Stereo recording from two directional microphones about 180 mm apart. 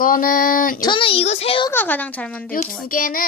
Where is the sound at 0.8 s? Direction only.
30° left (ahead or behind).